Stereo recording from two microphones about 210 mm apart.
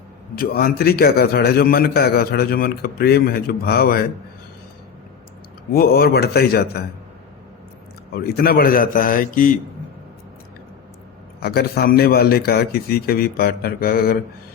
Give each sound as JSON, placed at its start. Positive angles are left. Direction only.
{"t": 0.3, "sound": "a man's voice", "side_deg": 45}
{"t": 5.7, "sound": "a man's voice", "side_deg": 45}
{"t": 8.1, "sound": "a man's voice", "side_deg": 45}
{"t": 11.3, "sound": "a man's voice", "side_deg": 50}